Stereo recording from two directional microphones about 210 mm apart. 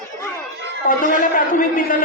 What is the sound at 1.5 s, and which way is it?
Speech, 40° left (ahead or behind).